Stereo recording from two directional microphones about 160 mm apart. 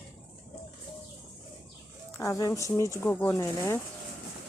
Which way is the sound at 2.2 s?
20° left (ahead or behind).